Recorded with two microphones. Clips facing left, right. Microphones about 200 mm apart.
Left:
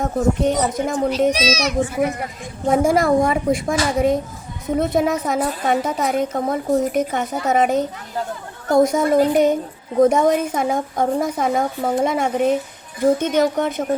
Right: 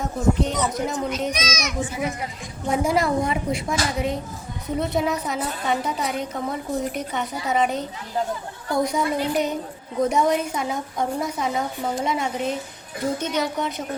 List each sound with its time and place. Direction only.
0.0 s a woman's voice: 50° left (ahead or behind)
1.3 s a child's voice: 35° left (ahead or behind)
1.8 s a woman's voice: 55° left (ahead or behind)